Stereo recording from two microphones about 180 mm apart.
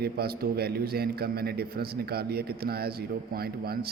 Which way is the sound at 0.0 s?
60° right (ahead or behind).